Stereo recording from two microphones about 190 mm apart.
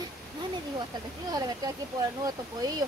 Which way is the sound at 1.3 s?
20° right (ahead or behind).